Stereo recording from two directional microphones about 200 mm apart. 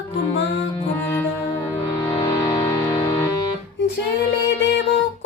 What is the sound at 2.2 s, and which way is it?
Music, 15° left (ahead or behind).